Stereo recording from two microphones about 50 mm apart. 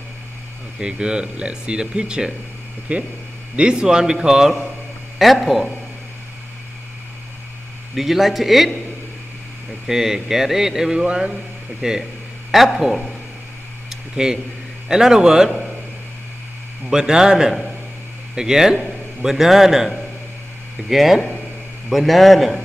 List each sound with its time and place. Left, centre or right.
0.7 s speech: centre
5.2 s a man's voice: centre
7.9 s a man's voice: centre
9.8 s speech: centre
12.4 s speech: centre
16.9 s speech: centre
20.9 s a man's voice: centre